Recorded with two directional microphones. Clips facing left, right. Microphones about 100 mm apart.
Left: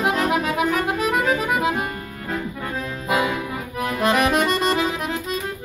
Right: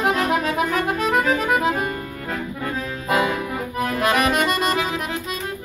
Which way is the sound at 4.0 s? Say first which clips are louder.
Left 1 dB; 25° left (ahead or behind).